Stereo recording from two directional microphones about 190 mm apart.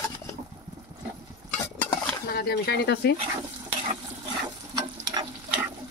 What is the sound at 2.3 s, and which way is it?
Speech, 55° left (ahead or behind).